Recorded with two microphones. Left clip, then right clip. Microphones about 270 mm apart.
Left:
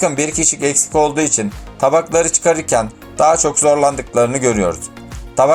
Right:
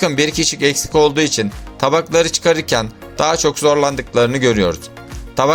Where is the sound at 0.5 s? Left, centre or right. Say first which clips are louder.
Right 1 dB; right.